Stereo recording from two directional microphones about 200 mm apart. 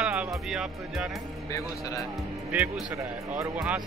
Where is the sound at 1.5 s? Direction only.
15° left (ahead or behind).